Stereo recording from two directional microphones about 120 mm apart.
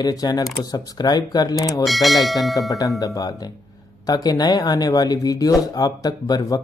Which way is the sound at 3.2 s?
35° left (ahead or behind).